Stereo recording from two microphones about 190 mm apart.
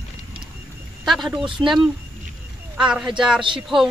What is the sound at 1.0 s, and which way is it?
Speech, centre (ahead or behind).